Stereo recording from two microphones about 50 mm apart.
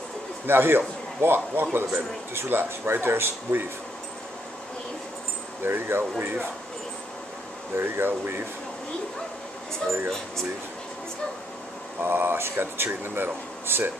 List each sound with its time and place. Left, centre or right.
0.5 s speech: right
5.6 s speech: right
7.7 s speech: right
12.0 s speech: right